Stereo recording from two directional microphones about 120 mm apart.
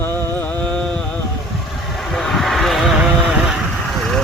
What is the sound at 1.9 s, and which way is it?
Vehicle, centre (ahead or behind).